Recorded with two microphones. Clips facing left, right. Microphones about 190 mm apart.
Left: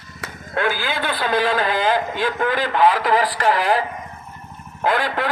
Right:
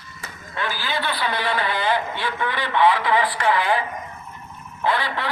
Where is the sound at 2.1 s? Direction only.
40° left (ahead or behind).